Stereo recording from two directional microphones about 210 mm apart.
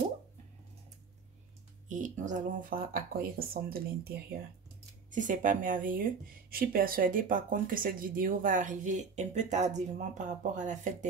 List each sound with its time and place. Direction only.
2.0 s speech: 35° right (ahead or behind)